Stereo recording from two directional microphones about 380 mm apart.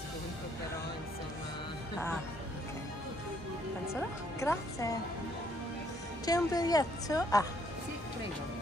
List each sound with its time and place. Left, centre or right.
3.8 s speech: centre
6.2 s a woman's voice: centre